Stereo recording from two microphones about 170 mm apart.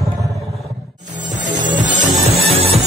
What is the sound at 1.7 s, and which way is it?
Music, 45° right (ahead or behind).